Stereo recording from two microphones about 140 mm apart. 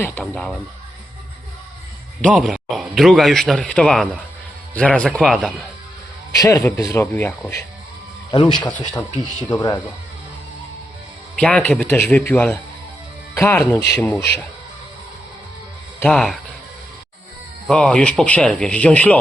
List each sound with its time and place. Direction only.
0.2 s speech: 5° left (ahead or behind)
2.3 s a man's voice: 5° right (ahead or behind)
6.3 s a man's voice: 25° left (ahead or behind)
8.3 s a man's voice: 30° left (ahead or behind)
11.3 s a man's voice: 10° left (ahead or behind)
16.0 s speech: 5° left (ahead or behind)
17.7 s a man's voice: 5° left (ahead or behind)